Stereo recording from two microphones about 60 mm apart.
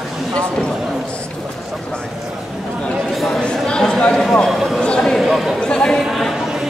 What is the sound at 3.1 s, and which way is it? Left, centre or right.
Chatter, centre.